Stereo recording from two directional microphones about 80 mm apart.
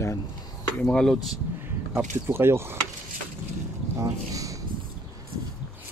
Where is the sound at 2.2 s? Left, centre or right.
Right.